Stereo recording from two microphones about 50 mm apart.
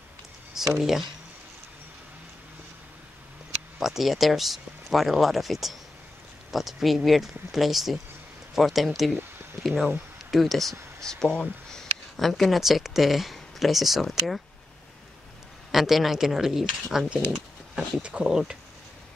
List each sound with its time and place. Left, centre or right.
0.6 s speech: centre
3.8 s speech: centre
15.7 s speech: centre
18.0 s speech: right